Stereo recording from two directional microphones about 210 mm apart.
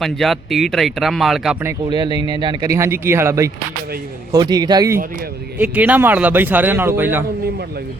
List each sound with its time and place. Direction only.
0.0 s speech: centre (ahead or behind)
1.6 s a man's voice: 20° right (ahead or behind)
5.5 s speech: 5° right (ahead or behind)